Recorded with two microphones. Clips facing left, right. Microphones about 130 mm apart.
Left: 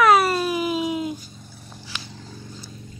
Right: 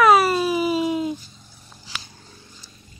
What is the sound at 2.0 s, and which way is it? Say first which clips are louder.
Clip-clop: left 8 dB; 90° left.